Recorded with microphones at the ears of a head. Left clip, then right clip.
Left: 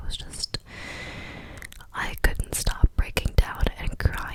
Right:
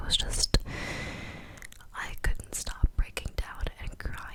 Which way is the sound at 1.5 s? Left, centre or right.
Left.